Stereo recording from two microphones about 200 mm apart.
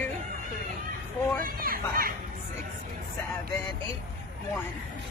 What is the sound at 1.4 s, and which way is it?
Speech, 45° right (ahead or behind).